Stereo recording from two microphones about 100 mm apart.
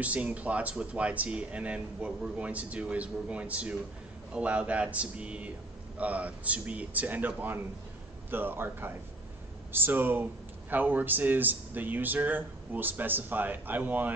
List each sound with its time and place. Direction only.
0.0 s speech: 15° right (ahead or behind)